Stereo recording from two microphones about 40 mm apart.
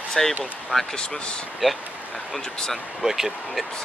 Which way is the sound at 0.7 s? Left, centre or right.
Left.